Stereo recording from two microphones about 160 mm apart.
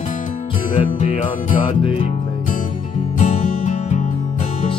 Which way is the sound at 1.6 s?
35° left (ahead or behind).